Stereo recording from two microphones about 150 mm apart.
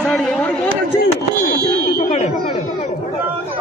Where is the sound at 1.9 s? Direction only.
55° left (ahead or behind).